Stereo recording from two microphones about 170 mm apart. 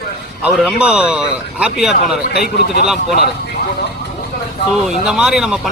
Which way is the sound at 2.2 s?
60° left (ahead or behind).